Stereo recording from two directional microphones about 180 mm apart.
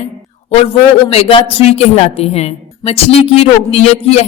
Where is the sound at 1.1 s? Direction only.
35° left (ahead or behind).